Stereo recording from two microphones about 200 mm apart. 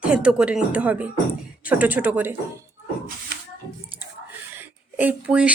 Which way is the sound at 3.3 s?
55° right (ahead or behind).